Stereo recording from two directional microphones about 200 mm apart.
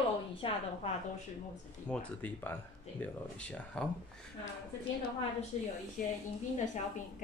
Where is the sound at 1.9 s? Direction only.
10° left (ahead or behind).